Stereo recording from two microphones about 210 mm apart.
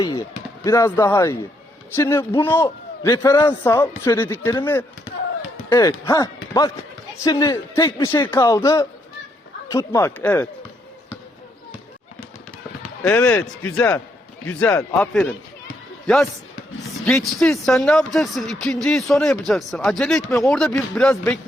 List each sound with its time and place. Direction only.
0.0 s a man's voice: 15° left (ahead or behind)
13.0 s a man's voice: 10° left (ahead or behind)
17.2 s speech: centre (ahead or behind)